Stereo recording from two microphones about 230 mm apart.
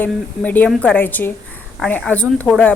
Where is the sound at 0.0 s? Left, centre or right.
Centre.